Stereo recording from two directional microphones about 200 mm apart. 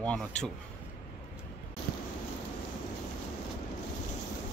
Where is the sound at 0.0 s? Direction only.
5° left (ahead or behind).